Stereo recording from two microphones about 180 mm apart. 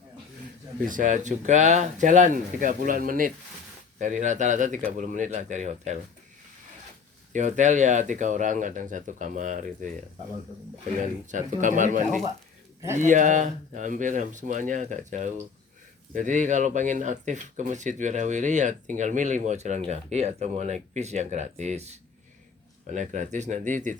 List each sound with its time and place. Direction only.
0.9 s speech: 45° right (ahead or behind)
7.3 s speech: 45° right (ahead or behind)
11.0 s speech: 45° right (ahead or behind)
22.9 s speech: 40° right (ahead or behind)